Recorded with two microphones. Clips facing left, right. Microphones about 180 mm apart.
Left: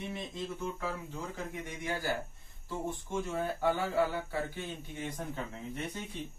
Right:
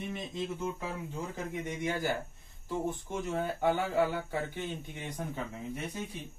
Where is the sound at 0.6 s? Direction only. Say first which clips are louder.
Right 1 dB; 20° right (ahead or behind).